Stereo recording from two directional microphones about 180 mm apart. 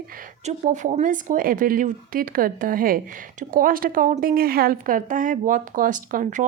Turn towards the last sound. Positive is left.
turn(degrees=-45)  # may be behind; listen again after turning